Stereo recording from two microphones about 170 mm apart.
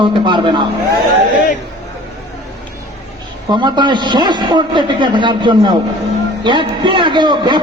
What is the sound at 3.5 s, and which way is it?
A man's voice, 25° right (ahead or behind).